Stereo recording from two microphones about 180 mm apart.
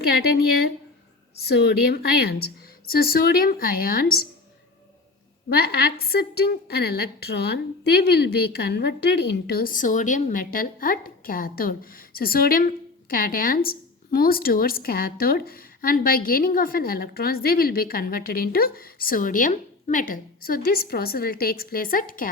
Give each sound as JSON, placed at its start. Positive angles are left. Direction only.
{"t": 1.4, "sound": "a woman's voice", "side_deg": 65}
{"t": 5.5, "sound": "a woman's voice", "side_deg": 60}